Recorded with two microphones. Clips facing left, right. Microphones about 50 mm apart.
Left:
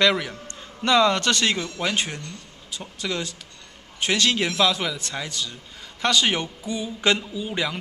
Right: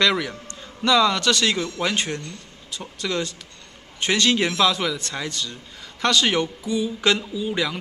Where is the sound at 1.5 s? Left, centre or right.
Centre.